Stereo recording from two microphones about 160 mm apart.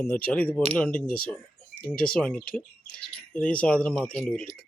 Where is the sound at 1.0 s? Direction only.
65° left (ahead or behind).